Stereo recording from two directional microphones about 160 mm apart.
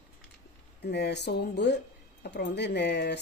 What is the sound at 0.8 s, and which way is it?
Speech, 90° left.